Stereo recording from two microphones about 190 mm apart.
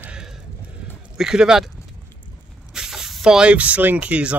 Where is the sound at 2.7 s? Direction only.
5° right (ahead or behind).